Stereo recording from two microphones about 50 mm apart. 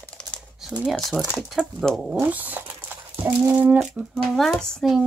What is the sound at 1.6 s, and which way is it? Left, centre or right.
Speech, right.